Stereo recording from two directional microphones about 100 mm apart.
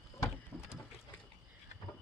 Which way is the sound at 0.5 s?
25° left (ahead or behind).